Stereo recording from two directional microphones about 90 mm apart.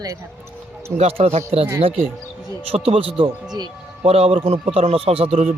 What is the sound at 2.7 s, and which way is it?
A man's voice, 90° right.